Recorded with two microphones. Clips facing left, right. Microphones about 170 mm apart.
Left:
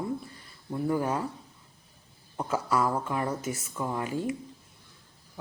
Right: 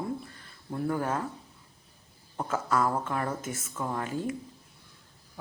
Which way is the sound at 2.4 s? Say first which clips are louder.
Left 1 dB; 10° left (ahead or behind).